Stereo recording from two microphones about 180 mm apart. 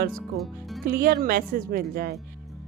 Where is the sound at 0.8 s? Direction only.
55° right (ahead or behind).